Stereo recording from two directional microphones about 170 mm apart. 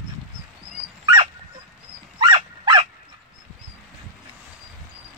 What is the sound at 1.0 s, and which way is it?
Dog, 30° right (ahead or behind).